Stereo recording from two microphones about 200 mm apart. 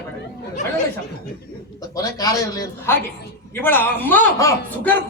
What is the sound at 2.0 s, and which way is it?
A man's voice, 20° left (ahead or behind).